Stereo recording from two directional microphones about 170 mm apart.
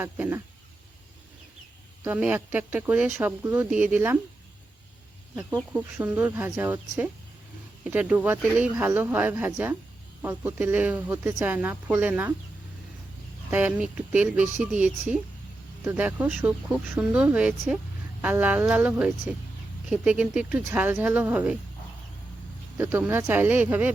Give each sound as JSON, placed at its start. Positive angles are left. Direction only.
{"t": 0.0, "sound": "speech", "side_deg": -10}
{"t": 2.0, "sound": "speech", "side_deg": -10}
{"t": 5.7, "sound": "speech", "side_deg": -10}
{"t": 13.5, "sound": "speech", "side_deg": -10}
{"t": 22.8, "sound": "speech", "side_deg": -10}